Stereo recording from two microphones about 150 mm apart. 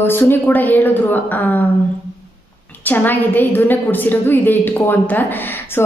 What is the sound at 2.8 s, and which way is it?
A woman's voice, 10° left (ahead or behind).